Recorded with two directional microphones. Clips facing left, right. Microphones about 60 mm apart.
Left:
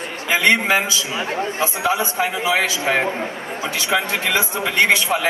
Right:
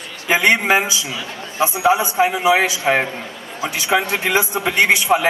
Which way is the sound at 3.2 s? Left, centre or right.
Left.